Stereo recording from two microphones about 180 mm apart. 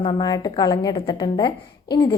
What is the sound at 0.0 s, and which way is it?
A woman's voice, 25° left (ahead or behind).